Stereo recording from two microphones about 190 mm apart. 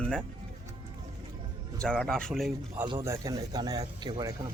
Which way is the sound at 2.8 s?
20° right (ahead or behind).